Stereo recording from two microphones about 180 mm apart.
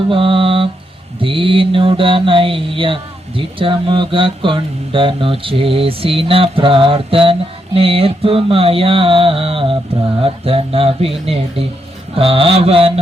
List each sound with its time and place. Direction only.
0.1 s mantra: 30° right (ahead or behind)
10.2 s speech: 30° right (ahead or behind)